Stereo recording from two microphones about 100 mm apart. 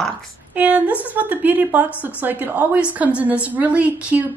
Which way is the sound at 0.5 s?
15° right (ahead or behind).